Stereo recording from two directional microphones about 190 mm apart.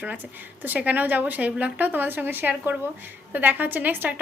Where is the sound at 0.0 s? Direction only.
10° right (ahead or behind).